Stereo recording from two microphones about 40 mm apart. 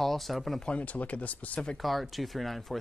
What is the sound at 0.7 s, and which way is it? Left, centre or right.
Speech, left.